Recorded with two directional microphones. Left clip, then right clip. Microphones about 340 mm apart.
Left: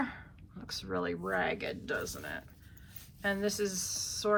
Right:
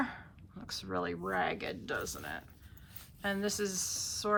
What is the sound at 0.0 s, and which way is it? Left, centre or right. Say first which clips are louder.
Speech: even; centre.